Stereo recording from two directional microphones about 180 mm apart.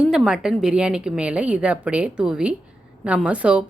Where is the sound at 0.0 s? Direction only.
5° right (ahead or behind).